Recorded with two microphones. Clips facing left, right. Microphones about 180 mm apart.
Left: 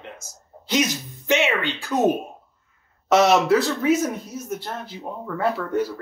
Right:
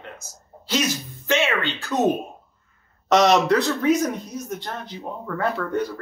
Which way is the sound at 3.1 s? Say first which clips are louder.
Even; 5° left (ahead or behind).